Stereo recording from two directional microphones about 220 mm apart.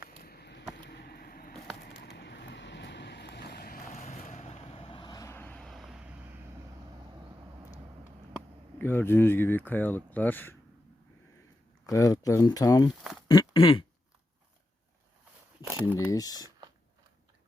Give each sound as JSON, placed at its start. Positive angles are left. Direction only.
{"t": 0.1, "sound": "a sound", "side_deg": 45}
{"t": 1.8, "sound": "vehicle", "side_deg": 50}
{"t": 7.2, "sound": "vehicle", "side_deg": -10}
{"t": 8.8, "sound": "speech", "side_deg": 10}
{"t": 11.9, "sound": "speech", "side_deg": 15}
{"t": 13.2, "sound": "a sound", "side_deg": 20}
{"t": 16.0, "sound": "speech", "side_deg": 15}